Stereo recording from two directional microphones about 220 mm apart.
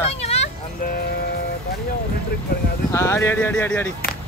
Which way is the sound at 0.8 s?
45° left (ahead or behind).